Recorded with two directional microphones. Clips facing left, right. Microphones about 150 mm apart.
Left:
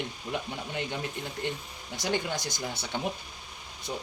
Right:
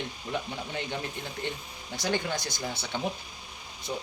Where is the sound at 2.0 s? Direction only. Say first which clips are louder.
Even; 15° left (ahead or behind).